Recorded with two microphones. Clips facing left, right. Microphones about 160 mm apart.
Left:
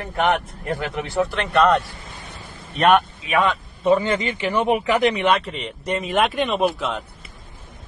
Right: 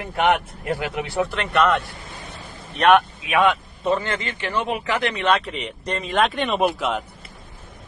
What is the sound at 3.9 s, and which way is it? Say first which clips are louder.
Speech: left 5 dB; 15° left (ahead or behind).